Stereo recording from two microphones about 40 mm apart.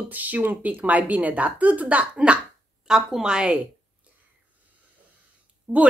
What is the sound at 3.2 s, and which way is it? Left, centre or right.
Speech, right.